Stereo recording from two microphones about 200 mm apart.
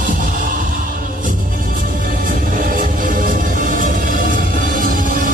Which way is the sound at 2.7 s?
45° right (ahead or behind).